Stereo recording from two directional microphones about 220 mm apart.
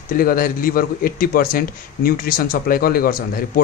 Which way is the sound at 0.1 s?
40° left (ahead or behind).